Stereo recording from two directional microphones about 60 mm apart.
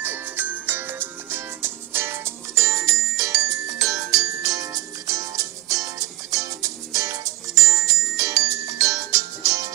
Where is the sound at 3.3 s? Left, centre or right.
Right.